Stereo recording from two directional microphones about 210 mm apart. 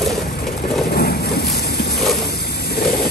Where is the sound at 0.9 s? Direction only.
50° left (ahead or behind).